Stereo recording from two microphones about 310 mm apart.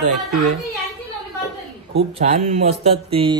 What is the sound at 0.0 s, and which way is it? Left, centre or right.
Speech, right.